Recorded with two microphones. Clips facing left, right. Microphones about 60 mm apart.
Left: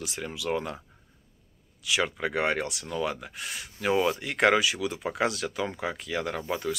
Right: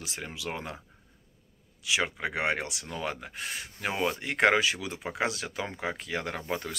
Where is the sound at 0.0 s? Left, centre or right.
Right.